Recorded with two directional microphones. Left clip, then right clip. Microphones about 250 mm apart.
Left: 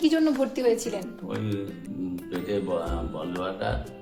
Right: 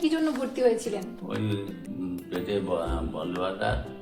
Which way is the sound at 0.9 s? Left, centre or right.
Centre.